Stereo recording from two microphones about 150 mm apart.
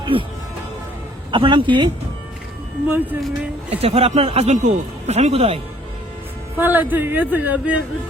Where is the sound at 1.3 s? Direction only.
35° right (ahead or behind).